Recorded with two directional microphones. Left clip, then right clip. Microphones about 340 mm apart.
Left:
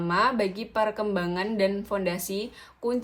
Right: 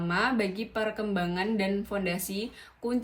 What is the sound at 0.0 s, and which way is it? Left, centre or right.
A woman's voice, centre.